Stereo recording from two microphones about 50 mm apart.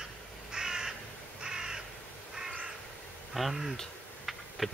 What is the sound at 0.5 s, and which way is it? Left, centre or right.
Crow, centre.